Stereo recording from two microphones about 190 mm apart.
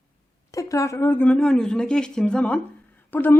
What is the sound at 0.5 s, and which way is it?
Speech, 15° left (ahead or behind).